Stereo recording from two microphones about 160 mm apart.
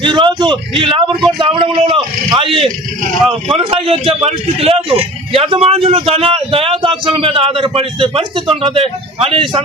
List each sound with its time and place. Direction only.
0.0 s a man's voice: 30° right (ahead or behind)